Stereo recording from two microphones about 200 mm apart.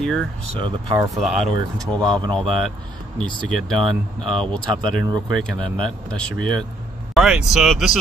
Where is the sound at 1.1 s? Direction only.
Centre (ahead or behind).